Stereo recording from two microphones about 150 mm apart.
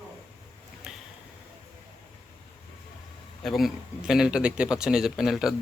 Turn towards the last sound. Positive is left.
turn(degrees=-5)  # may be behind; listen again after turning